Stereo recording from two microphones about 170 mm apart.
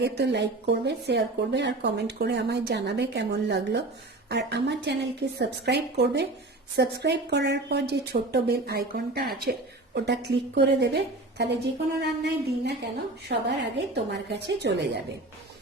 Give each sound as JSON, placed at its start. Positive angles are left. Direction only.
{"t": 0.0, "sound": "a woman's voice", "side_deg": -80}
{"t": 9.4, "sound": "a woman's voice", "side_deg": -75}
{"t": 13.2, "sound": "speech", "side_deg": -85}